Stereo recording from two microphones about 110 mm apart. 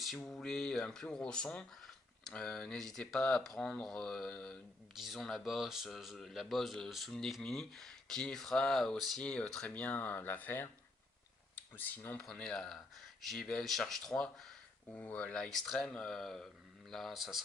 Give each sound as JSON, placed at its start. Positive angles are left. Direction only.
{"t": 0.0, "sound": "speech", "side_deg": 0}
{"t": 12.2, "sound": "speech", "side_deg": 5}
{"t": 14.9, "sound": "speech", "side_deg": 15}